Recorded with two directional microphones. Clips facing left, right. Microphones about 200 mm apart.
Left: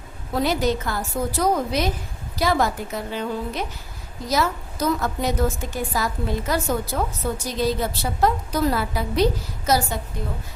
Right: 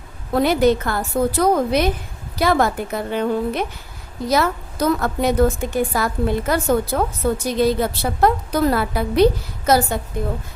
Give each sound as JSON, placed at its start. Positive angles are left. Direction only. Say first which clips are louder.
{"t": 0.3, "sound": "a woman's voice", "louder": "right 6 dB", "side_deg": -60}